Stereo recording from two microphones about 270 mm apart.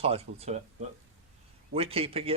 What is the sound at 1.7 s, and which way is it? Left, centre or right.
Speech, right.